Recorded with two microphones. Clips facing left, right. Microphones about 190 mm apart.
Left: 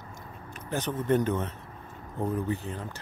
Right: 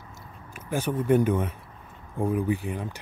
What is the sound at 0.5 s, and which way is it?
A man's voice, 10° right (ahead or behind).